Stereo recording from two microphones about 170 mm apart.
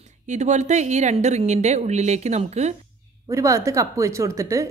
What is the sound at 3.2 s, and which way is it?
A woman's voice, 20° right (ahead or behind).